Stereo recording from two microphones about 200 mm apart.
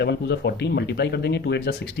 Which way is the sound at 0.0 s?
55° left (ahead or behind).